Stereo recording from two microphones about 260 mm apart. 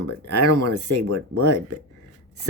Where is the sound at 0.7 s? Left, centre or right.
Right.